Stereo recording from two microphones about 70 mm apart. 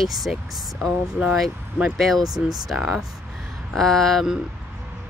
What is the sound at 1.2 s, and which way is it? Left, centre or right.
Speech, centre.